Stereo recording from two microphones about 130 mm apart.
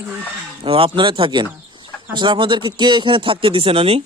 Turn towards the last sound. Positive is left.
turn(degrees=-45)  # may be behind; listen again after turning